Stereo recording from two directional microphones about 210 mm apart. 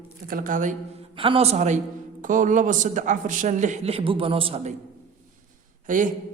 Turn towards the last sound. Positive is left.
turn(degrees=-40)  # may be behind; listen again after turning